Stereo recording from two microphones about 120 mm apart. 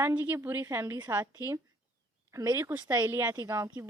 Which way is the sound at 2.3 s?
25° right (ahead or behind).